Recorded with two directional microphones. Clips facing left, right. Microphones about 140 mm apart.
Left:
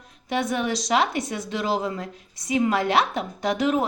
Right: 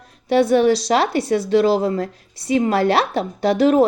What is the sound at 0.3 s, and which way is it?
Speech, 35° right (ahead or behind).